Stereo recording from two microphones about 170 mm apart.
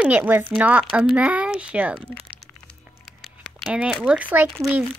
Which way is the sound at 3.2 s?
Centre (ahead or behind).